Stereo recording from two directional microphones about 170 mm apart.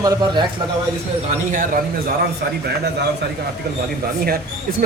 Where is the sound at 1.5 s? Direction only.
50° right (ahead or behind).